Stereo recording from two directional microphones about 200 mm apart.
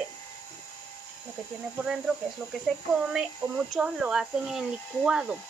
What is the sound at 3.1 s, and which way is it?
Speech, 5° right (ahead or behind).